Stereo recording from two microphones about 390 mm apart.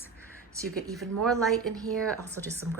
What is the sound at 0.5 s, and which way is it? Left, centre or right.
A woman's voice, centre.